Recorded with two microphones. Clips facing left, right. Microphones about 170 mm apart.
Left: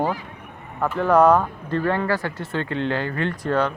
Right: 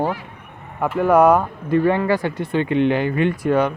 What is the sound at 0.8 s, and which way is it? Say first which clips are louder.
Speech: right 2 dB; 10° right (ahead or behind).